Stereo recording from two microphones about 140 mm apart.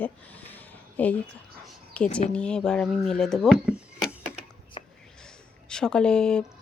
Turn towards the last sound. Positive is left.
turn(degrees=5)  # may be behind; listen again after turning